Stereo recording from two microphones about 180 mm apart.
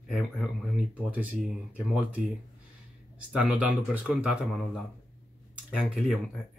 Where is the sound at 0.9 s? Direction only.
10° right (ahead or behind).